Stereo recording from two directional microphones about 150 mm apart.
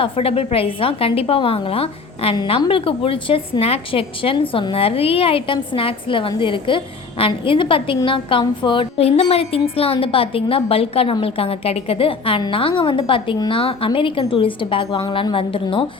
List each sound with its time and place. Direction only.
0.0 s a woman's voice: 40° left (ahead or behind)
14.8 s a woman's voice: 25° left (ahead or behind)
15.1 s a woman's voice: 35° left (ahead or behind)